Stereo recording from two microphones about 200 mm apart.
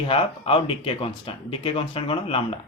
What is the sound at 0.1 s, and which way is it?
Speech, 25° left (ahead or behind).